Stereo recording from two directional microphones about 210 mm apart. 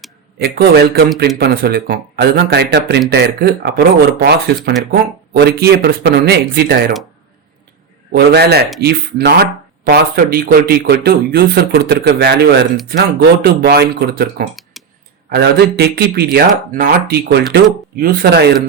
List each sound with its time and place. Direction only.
0.3 s speech: 50° right (ahead or behind)
8.1 s speech: 50° right (ahead or behind)
14.5 s a sound: centre (ahead or behind)
15.3 s speech: 50° right (ahead or behind)